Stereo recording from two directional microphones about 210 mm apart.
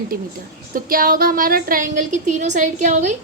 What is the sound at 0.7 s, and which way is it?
A woman's voice, 45° right (ahead or behind).